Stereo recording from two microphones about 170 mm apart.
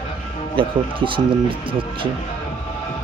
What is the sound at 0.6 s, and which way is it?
Speech, 30° right (ahead or behind).